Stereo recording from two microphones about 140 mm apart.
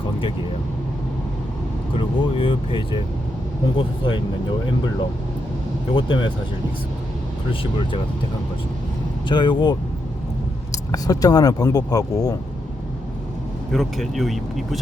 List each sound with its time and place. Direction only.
2.0 s speech: 40° left (ahead or behind)
5.9 s speech: 35° left (ahead or behind)
9.3 s speech: 35° left (ahead or behind)
13.7 s speech: centre (ahead or behind)